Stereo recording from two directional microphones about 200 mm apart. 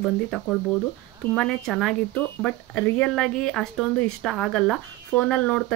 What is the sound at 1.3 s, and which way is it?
Speech, centre (ahead or behind).